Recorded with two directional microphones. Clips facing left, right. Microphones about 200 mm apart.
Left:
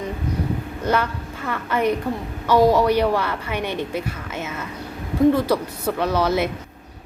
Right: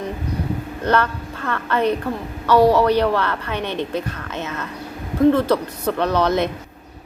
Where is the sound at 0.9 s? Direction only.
10° left (ahead or behind).